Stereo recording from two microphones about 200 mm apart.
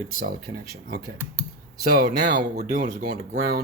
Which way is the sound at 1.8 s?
50° right (ahead or behind).